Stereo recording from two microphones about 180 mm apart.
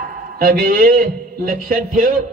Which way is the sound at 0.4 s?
55° right (ahead or behind).